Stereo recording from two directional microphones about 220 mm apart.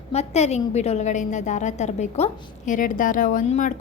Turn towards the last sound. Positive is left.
turn(degrees=35)  # may be behind; listen again after turning